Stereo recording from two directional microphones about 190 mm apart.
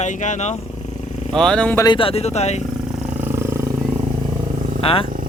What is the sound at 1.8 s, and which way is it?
Speech, 25° left (ahead or behind).